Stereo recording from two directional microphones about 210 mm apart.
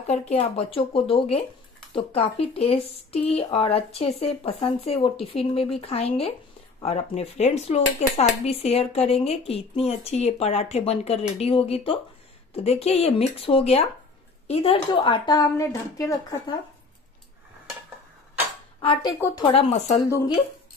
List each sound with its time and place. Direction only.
0.0 s speech: 30° left (ahead or behind)
18.8 s speech: 25° left (ahead or behind)
19.1 s speech: 10° left (ahead or behind)
19.4 s speech: 30° left (ahead or behind)